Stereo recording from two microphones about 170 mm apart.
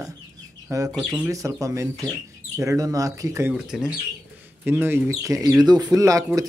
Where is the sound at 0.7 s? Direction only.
15° right (ahead or behind).